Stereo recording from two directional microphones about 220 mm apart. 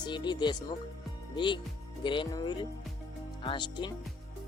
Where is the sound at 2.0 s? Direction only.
20° left (ahead or behind).